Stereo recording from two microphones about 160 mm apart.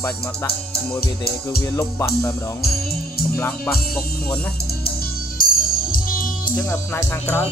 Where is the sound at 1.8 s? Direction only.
15° left (ahead or behind).